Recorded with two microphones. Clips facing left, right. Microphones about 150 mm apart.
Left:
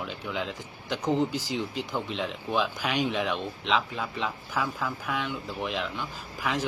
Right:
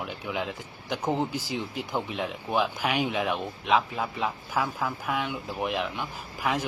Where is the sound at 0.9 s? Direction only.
10° right (ahead or behind).